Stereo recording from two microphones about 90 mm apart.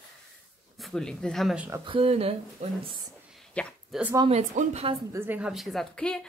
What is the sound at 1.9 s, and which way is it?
Speech, 90° right.